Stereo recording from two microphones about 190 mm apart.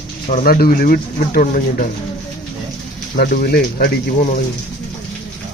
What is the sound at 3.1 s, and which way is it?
Speech, 50° left (ahead or behind).